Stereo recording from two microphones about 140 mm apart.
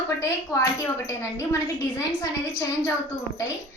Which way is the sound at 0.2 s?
20° left (ahead or behind).